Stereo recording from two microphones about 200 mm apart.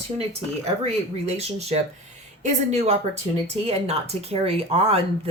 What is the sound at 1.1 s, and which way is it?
Speech, 30° right (ahead or behind).